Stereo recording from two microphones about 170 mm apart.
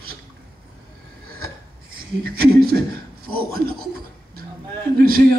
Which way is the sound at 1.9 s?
60° right (ahead or behind).